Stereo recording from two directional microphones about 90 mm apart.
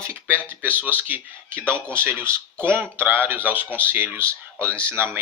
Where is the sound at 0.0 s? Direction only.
25° right (ahead or behind).